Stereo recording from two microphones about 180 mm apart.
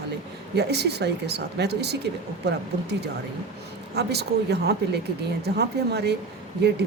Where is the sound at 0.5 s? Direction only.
65° right (ahead or behind).